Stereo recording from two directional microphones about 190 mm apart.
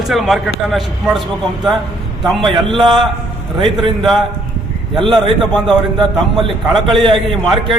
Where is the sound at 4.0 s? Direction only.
Centre (ahead or behind).